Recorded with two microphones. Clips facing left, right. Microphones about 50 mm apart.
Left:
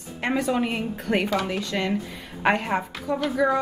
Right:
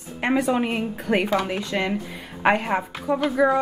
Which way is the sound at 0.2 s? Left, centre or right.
Centre.